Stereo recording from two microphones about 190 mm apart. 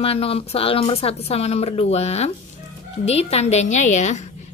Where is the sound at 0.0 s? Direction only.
30° left (ahead or behind).